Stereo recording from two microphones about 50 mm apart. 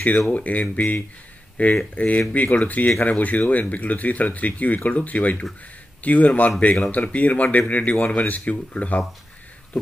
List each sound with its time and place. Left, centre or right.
0.3 s speech: left